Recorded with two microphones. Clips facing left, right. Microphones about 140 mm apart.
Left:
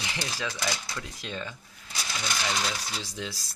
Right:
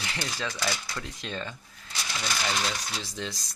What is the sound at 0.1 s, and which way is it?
Speech, 10° left (ahead or behind).